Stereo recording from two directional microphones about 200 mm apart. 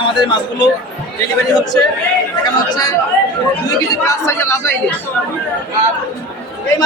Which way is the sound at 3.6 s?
15° left (ahead or behind).